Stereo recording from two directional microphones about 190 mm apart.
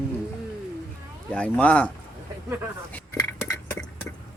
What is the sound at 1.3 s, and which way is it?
Speech, 5° left (ahead or behind).